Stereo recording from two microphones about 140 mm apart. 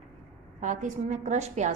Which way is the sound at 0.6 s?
65° right (ahead or behind).